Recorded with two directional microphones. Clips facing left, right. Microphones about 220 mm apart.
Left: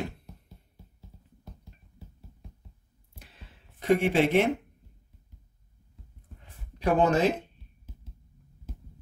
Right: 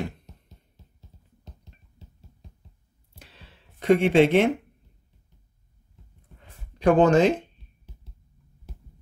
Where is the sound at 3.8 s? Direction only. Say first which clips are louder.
Right 5 dB; 85° right.